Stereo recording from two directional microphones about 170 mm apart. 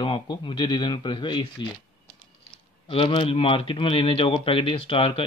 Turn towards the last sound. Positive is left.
turn(degrees=30)  # may be behind; listen again after turning